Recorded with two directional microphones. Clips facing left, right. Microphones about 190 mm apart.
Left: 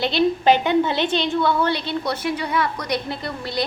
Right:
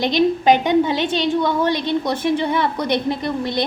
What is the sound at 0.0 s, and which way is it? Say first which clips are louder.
A woman's voice: right 2 dB; 15° right (ahead or behind).